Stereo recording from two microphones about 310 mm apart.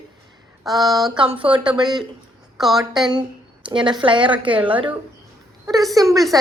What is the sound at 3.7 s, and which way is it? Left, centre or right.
Speech, centre.